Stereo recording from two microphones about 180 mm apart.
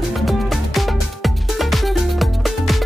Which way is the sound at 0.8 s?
Centre (ahead or behind).